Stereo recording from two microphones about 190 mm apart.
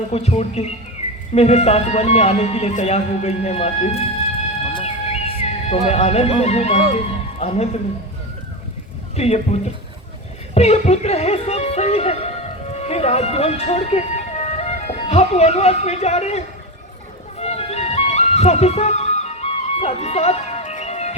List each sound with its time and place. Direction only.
0.1 s speech: 35° left (ahead or behind)
4.7 s music: 35° left (ahead or behind)
9.1 s speech: 35° left (ahead or behind)
17.3 s music: 35° left (ahead or behind)